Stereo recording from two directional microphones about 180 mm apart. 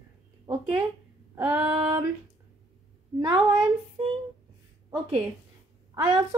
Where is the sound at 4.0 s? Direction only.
30° right (ahead or behind).